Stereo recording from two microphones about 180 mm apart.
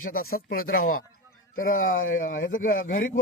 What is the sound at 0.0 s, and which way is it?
Speech, 55° left (ahead or behind).